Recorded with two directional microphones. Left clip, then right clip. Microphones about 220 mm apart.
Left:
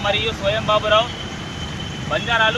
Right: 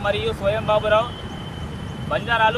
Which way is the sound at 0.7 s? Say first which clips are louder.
Left 2 dB; 20° right (ahead or behind).